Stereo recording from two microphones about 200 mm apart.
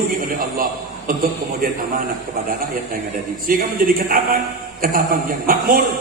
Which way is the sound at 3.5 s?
45° right (ahead or behind).